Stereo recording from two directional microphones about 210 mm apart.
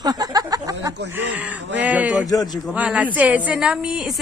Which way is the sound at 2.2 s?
20° left (ahead or behind).